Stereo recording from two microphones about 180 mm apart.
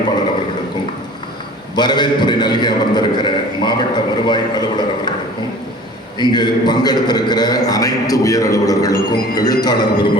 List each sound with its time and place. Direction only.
1.7 s a man's voice: 25° left (ahead or behind)
6.1 s a man's voice: 25° left (ahead or behind)